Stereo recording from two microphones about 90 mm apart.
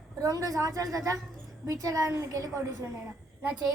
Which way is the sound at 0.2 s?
40° right (ahead or behind).